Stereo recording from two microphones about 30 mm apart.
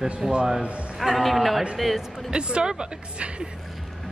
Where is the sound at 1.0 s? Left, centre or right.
Centre.